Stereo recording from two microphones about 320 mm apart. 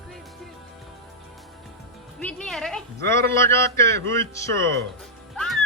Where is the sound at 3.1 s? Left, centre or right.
Centre.